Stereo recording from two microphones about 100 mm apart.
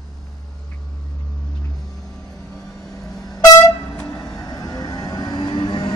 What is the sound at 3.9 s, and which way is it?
Vehicle, 20° left (ahead or behind).